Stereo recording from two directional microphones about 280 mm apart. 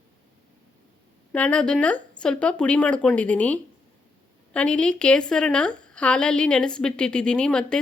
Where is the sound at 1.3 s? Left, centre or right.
Centre.